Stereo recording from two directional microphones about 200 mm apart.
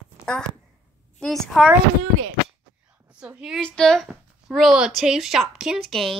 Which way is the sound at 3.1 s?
5° right (ahead or behind).